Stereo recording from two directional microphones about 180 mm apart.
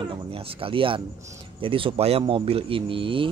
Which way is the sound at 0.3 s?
30° right (ahead or behind).